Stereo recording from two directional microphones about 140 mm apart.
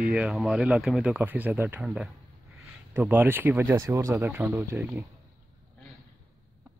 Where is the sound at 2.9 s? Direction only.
15° right (ahead or behind).